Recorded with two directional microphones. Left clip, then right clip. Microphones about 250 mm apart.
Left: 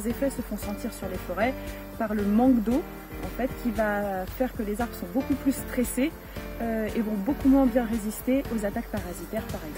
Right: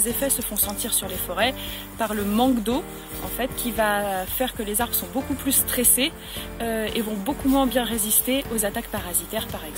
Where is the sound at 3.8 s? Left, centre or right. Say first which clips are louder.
Right 5 dB; centre.